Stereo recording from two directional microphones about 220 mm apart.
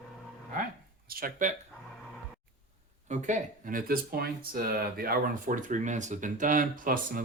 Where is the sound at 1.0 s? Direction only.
40° right (ahead or behind).